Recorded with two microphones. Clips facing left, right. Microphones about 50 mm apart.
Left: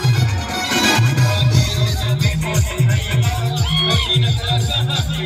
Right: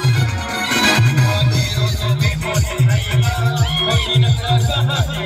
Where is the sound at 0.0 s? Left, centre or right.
Centre.